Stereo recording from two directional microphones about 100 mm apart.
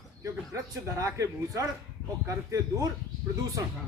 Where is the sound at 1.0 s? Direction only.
30° right (ahead or behind).